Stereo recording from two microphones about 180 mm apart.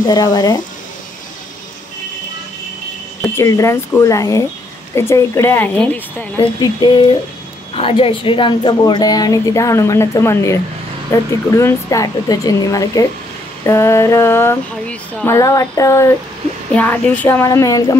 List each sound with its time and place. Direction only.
0.0 s a woman's voice: 20° left (ahead or behind)
3.3 s speech: 15° left (ahead or behind)
6.4 s a woman's voice: 25° left (ahead or behind)